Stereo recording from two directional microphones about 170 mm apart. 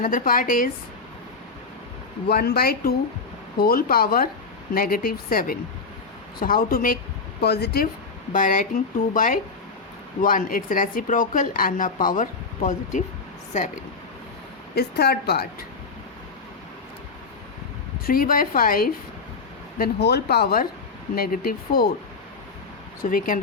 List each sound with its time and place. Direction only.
0.0 s speech: 55° left (ahead or behind)
2.2 s speech: 70° left (ahead or behind)
7.4 s speech: 70° left (ahead or behind)
8.3 s a woman's voice: 50° left (ahead or behind)
14.8 s speech: 70° left (ahead or behind)
18.0 s speech: 55° left (ahead or behind)
19.8 s speech: 75° left (ahead or behind)
23.0 s speech: 55° left (ahead or behind)